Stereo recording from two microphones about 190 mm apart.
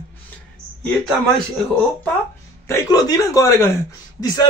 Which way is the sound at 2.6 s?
15° left (ahead or behind).